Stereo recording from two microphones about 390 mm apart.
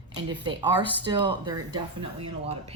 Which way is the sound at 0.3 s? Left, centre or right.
Centre.